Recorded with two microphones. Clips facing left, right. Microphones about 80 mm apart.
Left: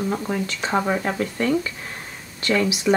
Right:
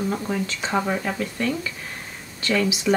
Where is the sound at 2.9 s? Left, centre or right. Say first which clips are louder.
Left 2 dB; centre.